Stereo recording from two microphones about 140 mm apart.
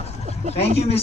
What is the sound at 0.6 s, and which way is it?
Speech, 45° left (ahead or behind).